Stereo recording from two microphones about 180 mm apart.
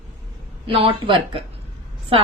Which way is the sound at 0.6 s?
30° right (ahead or behind).